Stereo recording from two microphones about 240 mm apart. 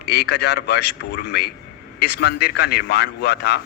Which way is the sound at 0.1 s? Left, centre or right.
Left.